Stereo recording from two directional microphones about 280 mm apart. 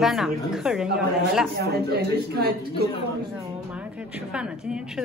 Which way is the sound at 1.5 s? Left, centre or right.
Right.